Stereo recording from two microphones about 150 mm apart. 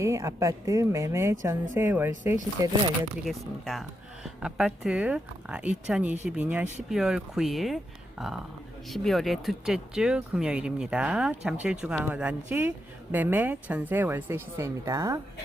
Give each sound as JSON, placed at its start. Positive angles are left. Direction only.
{"t": 0.0, "sound": "speech", "side_deg": -20}
{"t": 3.2, "sound": "speech", "side_deg": 0}
{"t": 8.9, "sound": "speech", "side_deg": 0}